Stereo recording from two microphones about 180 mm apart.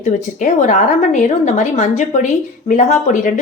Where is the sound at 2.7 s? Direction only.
45° left (ahead or behind).